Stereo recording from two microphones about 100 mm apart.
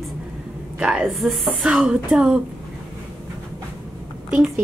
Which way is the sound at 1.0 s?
Centre (ahead or behind).